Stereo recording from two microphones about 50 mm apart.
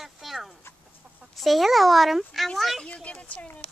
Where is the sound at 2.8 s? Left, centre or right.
Left.